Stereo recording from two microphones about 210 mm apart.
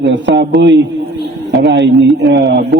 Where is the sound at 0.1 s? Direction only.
55° right (ahead or behind).